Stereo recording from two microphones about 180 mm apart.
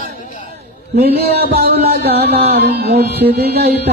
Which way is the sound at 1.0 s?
60° right (ahead or behind).